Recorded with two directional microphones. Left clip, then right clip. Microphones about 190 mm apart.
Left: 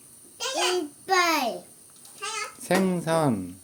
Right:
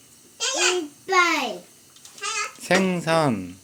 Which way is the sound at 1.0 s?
10° left (ahead or behind).